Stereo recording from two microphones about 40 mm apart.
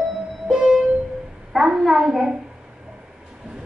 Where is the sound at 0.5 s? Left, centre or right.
Centre.